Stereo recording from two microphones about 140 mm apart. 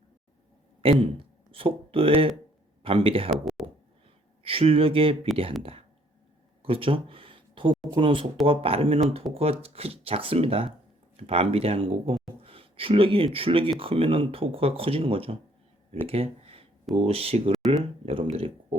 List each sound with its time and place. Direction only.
0.8 s speech: 40° right (ahead or behind)
3.2 s speech: centre (ahead or behind)
4.4 s speech: 40° right (ahead or behind)
6.6 s speech: 40° right (ahead or behind)
16.0 s a sound: 45° right (ahead or behind)
16.9 s speech: 45° right (ahead or behind)